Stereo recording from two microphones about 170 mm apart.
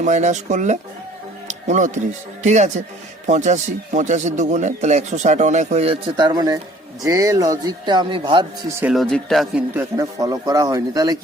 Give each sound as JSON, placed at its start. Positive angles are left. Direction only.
{"t": 0.0, "sound": "a man's voice", "side_deg": -45}
{"t": 8.8, "sound": "speech", "side_deg": 0}
{"t": 9.7, "sound": "a man's voice", "side_deg": -20}